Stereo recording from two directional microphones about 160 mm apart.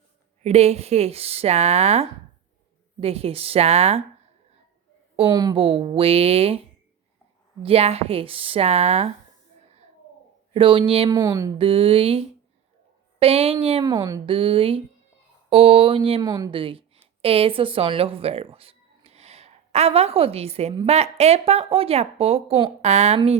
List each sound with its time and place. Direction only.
0.4 s speech: 40° right (ahead or behind)
5.3 s speech: 25° right (ahead or behind)
5.6 s speech: 35° right (ahead or behind)
10.5 s speech: 35° right (ahead or behind)
11.1 s speech: 20° right (ahead or behind)
11.5 s speech: 35° right (ahead or behind)
13.8 s speech: 20° right (ahead or behind)
14.3 s speech: 35° right (ahead or behind)
16.2 s speech: 20° right (ahead or behind)
16.5 s a woman's voice: 35° right (ahead or behind)